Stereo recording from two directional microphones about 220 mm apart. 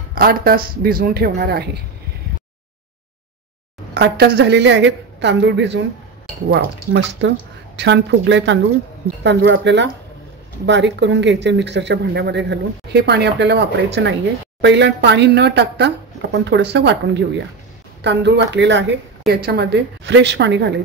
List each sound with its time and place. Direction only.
0.1 s speech: 45° right (ahead or behind)
3.9 s speech: 50° right (ahead or behind)